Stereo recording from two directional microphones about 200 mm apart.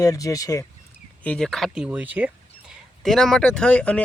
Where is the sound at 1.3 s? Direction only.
5° left (ahead or behind).